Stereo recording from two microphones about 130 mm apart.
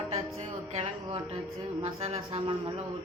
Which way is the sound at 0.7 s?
50° right (ahead or behind).